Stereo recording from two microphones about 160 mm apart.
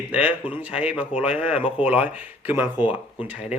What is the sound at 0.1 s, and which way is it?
Speech, 10° right (ahead or behind).